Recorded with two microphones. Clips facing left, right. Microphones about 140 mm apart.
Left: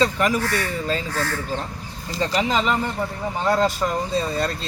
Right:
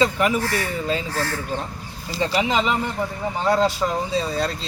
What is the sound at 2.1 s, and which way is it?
Speech, 5° right (ahead or behind).